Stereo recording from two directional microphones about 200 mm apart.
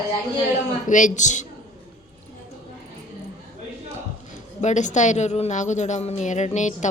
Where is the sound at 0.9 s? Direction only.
40° left (ahead or behind).